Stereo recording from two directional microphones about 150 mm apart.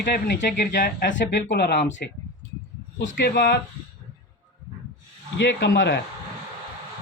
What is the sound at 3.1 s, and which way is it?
Speech, 90° left.